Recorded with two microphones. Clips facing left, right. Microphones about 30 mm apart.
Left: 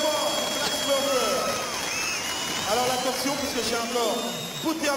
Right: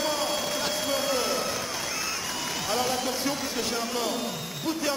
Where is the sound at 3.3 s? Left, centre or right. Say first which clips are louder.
Left 2 dB; centre.